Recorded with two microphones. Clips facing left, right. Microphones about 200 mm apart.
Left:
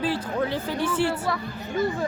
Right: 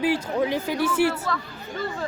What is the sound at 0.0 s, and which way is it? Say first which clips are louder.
Speech: right 3 dB; 10° right (ahead or behind).